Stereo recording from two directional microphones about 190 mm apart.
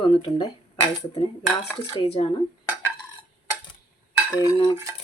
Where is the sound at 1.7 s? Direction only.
30° left (ahead or behind).